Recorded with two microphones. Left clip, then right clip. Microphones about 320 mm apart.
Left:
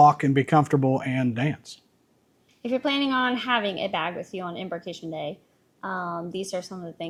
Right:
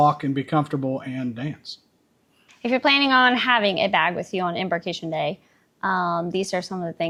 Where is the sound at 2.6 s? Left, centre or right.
Right.